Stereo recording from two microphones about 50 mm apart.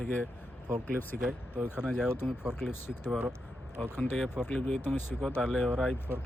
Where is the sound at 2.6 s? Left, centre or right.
Left.